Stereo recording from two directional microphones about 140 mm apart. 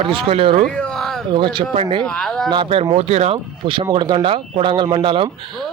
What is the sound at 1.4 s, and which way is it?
Speech, 35° right (ahead or behind).